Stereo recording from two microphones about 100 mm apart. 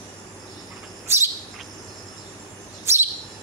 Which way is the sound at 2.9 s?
25° right (ahead or behind).